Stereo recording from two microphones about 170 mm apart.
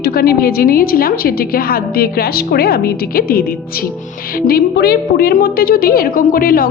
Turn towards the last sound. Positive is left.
turn(degrees=60)  # may be behind; listen again after turning